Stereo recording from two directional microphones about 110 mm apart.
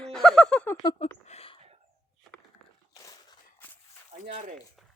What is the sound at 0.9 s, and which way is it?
Speech, 80° left.